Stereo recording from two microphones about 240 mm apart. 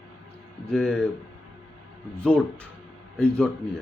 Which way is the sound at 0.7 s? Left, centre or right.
Centre.